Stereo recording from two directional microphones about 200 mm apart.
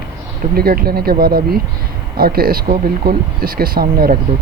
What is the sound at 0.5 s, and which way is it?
Speech, 50° right (ahead or behind).